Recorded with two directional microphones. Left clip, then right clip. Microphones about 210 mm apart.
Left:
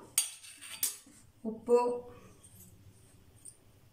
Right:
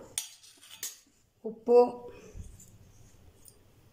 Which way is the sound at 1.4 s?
25° right (ahead or behind).